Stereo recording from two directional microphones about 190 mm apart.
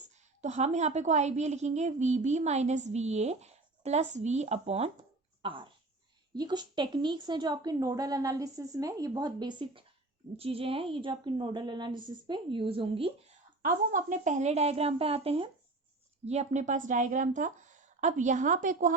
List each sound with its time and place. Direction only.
0.0 s a woman's voice: 35° right (ahead or behind)
13.6 s a woman's voice: 45° right (ahead or behind)